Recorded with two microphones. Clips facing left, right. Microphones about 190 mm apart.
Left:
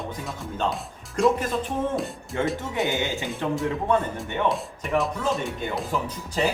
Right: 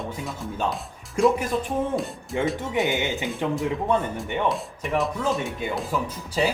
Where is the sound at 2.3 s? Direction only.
15° right (ahead or behind).